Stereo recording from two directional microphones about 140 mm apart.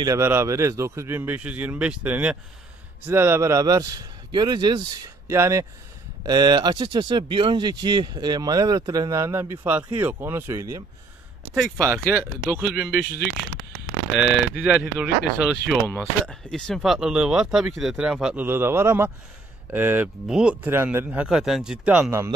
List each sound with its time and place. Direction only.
0.0 s a man's voice: 20° right (ahead or behind)
5.3 s a man's voice: 20° right (ahead or behind)
14.1 s a man's voice: 10° right (ahead or behind)
16.3 s a man's voice: 5° left (ahead or behind)